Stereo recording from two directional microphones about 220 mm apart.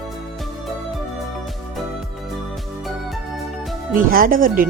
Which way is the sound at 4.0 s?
40° right (ahead or behind).